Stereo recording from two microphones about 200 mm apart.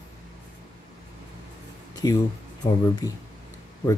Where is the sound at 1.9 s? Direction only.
20° left (ahead or behind).